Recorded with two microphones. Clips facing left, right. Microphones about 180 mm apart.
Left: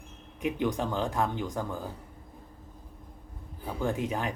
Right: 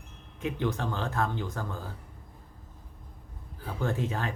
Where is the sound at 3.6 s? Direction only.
15° left (ahead or behind).